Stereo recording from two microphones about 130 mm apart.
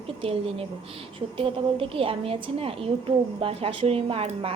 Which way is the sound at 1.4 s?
45° right (ahead or behind).